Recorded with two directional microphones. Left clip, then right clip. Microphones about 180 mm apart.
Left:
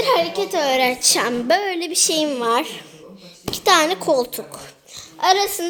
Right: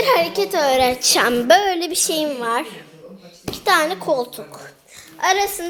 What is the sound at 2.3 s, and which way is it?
A woman's voice, 35° left (ahead or behind).